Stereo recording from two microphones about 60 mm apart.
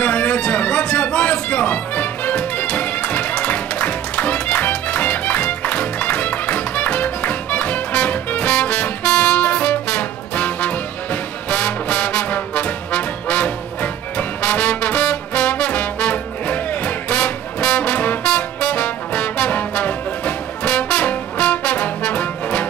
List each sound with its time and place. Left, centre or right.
0.0 s music: left
14.1 s brass instrument: left